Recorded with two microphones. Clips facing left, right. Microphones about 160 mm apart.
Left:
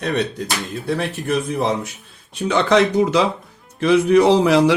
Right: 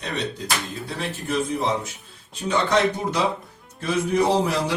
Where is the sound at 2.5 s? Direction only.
90° left.